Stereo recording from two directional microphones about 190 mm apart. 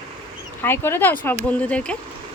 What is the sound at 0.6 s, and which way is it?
Speech, 10° left (ahead or behind).